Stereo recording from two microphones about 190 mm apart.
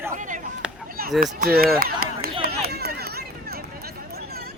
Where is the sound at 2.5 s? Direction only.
55° right (ahead or behind).